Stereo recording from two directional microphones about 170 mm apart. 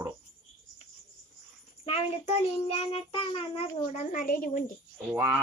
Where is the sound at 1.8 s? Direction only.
35° left (ahead or behind).